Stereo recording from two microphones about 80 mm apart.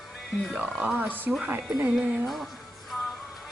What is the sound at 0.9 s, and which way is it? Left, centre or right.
Speech, right.